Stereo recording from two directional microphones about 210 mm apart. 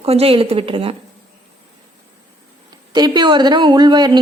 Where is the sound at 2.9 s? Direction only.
20° right (ahead or behind).